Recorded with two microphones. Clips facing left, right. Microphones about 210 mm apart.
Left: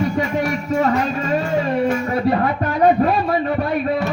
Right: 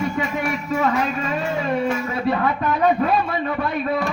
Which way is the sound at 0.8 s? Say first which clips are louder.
Left 3 dB; 40° left (ahead or behind).